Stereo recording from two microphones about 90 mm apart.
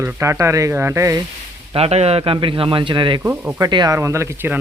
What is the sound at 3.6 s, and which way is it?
Speech, 50° right (ahead or behind).